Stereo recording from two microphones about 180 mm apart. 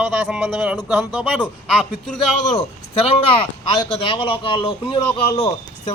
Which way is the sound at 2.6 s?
30° left (ahead or behind).